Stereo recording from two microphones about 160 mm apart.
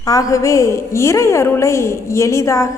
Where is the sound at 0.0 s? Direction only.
20° left (ahead or behind).